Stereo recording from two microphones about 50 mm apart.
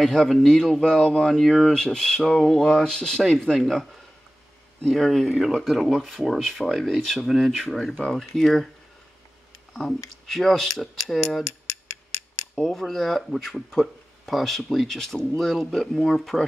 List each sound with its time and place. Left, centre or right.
0.0 s speech: centre
2.7 s speech: centre
3.5 s speech: centre
4.9 s speech: centre
8.3 s speech: centre
9.8 s speech: centre
12.5 s speech: centre